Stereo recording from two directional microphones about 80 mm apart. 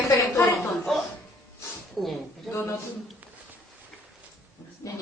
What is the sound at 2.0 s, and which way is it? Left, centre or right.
Speech, centre.